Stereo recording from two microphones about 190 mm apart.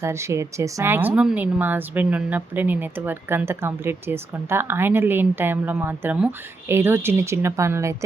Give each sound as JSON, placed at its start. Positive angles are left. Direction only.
{"t": 0.0, "sound": "a woman's voice", "side_deg": -15}